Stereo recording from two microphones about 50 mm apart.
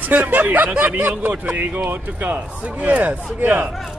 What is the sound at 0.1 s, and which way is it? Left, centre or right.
Speech, right.